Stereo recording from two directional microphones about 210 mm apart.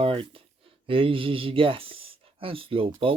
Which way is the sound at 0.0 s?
25° right (ahead or behind).